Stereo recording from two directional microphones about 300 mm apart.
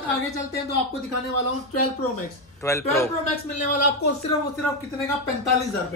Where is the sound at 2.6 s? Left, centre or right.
Centre.